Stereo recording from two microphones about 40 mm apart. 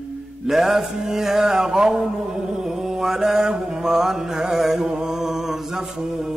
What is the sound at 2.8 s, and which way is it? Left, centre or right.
Mantra, centre.